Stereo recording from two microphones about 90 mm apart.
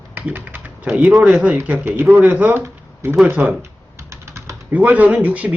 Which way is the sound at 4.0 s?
30° right (ahead or behind).